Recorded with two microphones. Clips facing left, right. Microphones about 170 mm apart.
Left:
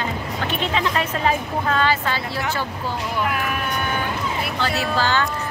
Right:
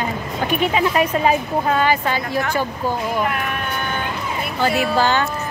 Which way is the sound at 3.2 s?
Centre (ahead or behind).